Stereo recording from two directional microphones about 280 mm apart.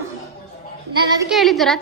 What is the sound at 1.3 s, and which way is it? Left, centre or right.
Speech, centre.